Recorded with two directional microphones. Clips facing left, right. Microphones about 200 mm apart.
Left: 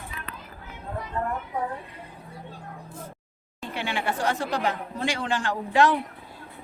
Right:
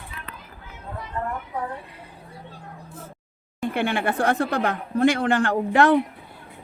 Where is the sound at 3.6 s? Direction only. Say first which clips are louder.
Right 7 dB; 55° right (ahead or behind).